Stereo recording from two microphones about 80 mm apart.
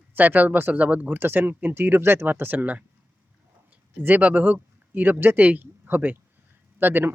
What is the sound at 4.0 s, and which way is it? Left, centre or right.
Speech, right.